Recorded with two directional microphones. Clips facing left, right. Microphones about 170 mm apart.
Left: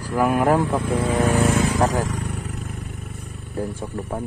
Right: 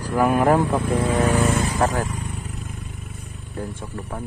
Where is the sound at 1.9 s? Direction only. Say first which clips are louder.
Left 2 dB; 90° left; by 3.3 s 65° left (ahead or behind).